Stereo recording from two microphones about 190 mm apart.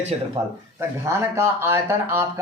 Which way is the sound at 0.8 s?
15° right (ahead or behind).